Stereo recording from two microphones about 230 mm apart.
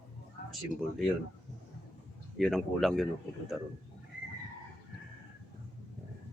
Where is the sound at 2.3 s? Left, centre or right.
Centre.